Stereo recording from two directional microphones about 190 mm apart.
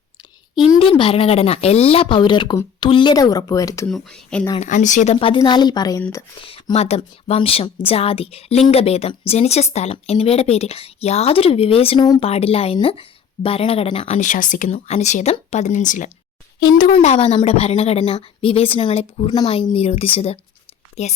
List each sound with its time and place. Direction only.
0.5 s speech: 25° left (ahead or behind)
3.8 s speech: 5° left (ahead or behind)
4.6 s speech: 40° left (ahead or behind); by 6.2 s 15° left (ahead or behind)
6.4 s a woman's voice: 30° left (ahead or behind)